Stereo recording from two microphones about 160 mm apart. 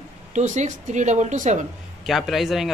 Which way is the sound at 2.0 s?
Centre (ahead or behind).